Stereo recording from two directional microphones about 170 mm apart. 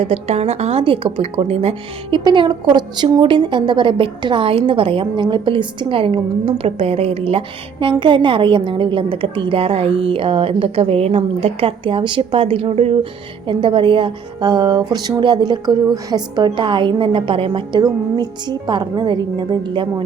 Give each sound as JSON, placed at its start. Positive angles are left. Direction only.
{"t": 0.0, "sound": "a woman's voice", "side_deg": -40}